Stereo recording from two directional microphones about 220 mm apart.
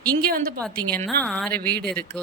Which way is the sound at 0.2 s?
45° right (ahead or behind).